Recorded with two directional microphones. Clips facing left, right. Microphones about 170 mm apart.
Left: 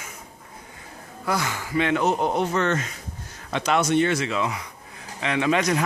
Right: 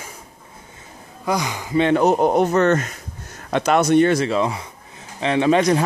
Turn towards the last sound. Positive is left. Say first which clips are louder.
# right 6 dB
turn(degrees=-30)  # may be behind; listen again after turning